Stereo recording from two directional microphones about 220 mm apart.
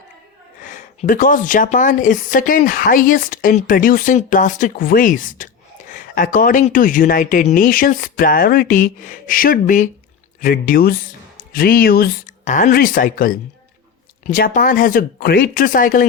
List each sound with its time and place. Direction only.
0.6 s a woman's voice: 35° left (ahead or behind)